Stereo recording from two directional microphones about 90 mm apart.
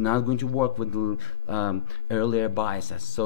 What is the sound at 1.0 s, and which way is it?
Speech, 25° left (ahead or behind).